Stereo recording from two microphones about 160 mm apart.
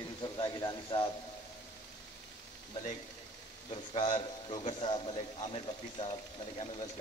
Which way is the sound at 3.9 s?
35° left (ahead or behind).